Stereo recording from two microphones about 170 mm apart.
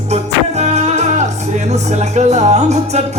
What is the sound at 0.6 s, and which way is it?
Music, 40° right (ahead or behind).